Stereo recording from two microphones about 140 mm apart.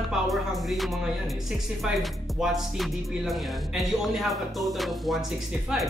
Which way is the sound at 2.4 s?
Centre (ahead or behind).